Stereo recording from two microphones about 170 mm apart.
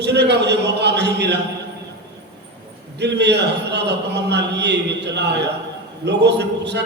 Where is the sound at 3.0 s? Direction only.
85° right.